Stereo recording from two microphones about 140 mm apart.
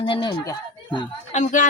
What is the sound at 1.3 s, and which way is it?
Speech, 60° left (ahead or behind).